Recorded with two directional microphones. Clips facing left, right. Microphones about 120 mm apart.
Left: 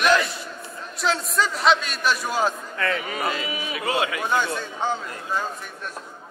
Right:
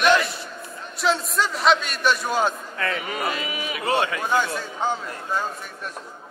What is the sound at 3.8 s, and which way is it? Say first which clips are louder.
Speech: right 2 dB; 30° right (ahead or behind).